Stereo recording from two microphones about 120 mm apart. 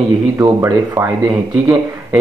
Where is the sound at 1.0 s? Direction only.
5° right (ahead or behind).